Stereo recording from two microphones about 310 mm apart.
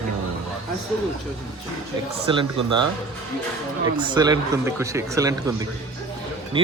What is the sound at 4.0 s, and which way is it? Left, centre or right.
A man's voice, centre.